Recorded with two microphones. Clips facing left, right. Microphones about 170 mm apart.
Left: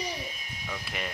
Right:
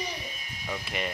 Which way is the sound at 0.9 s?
Centre (ahead or behind).